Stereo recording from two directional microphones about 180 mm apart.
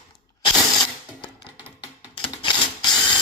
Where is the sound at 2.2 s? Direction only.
25° left (ahead or behind).